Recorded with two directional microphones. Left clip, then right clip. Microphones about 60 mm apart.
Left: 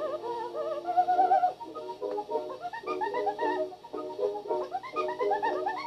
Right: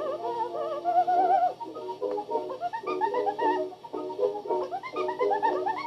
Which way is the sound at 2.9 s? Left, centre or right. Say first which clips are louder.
Right 2 dB; right.